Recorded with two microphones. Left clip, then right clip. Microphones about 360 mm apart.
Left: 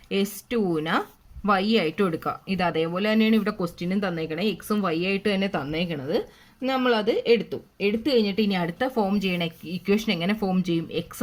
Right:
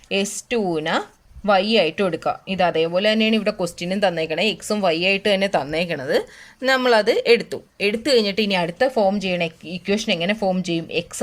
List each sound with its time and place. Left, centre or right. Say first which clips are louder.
0.1 s speech: right 4 dB; centre
5.5 s speech: right 7 dB; right
8.0 s speech: right 6 dB; centre